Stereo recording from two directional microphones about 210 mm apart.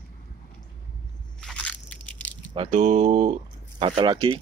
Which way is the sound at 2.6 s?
30° right (ahead or behind).